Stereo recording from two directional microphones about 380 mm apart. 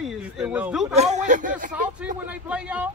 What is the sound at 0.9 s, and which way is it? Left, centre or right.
Speech, centre.